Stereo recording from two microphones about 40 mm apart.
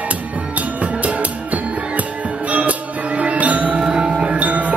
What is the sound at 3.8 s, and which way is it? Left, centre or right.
Music, centre.